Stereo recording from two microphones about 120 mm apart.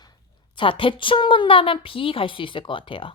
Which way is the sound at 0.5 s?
45° left (ahead or behind).